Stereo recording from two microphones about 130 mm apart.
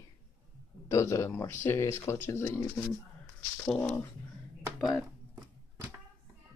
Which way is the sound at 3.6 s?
5° left (ahead or behind).